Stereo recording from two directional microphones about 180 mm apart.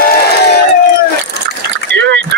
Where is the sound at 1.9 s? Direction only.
80° right.